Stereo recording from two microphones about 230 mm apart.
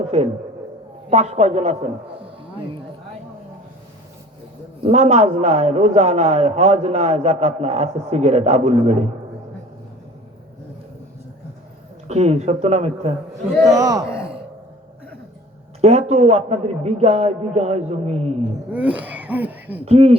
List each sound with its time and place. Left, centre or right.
0.0 s a sound: right
1.1 s a man's voice: right
4.8 s a man's voice: right
12.0 s a man's voice: right
13.7 s a man's voice: centre
14.1 s sigh: centre
15.8 s a man's voice: right
18.7 s throat clearing: centre
19.8 s a man's voice: right